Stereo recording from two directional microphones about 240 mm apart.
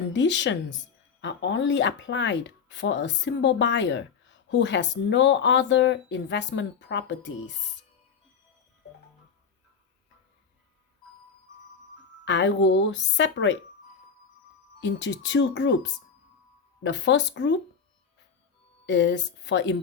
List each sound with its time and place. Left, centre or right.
0.1 s speech: left
12.2 s speech: left
14.8 s speech: left
18.9 s speech: left